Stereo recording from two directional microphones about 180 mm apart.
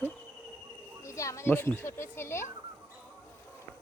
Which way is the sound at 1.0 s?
15° left (ahead or behind).